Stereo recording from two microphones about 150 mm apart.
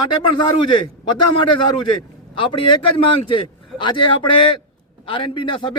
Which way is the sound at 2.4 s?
35° left (ahead or behind).